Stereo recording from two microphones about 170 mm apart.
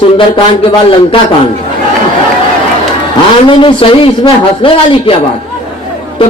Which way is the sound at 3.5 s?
30° left (ahead or behind).